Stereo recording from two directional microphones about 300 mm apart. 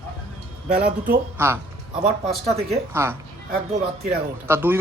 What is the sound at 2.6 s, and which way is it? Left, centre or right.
Speech, centre.